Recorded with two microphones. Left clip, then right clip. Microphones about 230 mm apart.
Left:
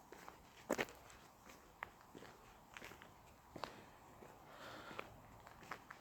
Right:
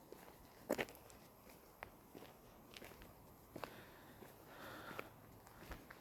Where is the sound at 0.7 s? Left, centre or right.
Centre.